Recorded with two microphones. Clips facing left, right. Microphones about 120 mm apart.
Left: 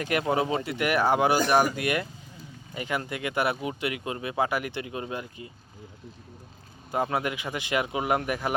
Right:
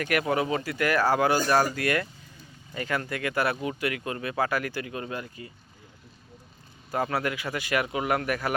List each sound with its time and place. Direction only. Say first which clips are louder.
0.0 s speech: even; 25° left (ahead or behind)
6.9 s speech: even; 20° left (ahead or behind)